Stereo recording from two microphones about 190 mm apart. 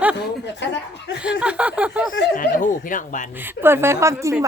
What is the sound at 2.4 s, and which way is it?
Speech, 45° left (ahead or behind).